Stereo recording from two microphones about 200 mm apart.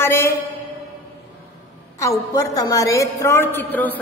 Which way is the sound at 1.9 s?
15° left (ahead or behind).